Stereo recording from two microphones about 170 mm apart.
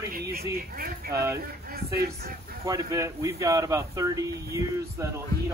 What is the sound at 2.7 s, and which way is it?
A man's voice, 20° right (ahead or behind).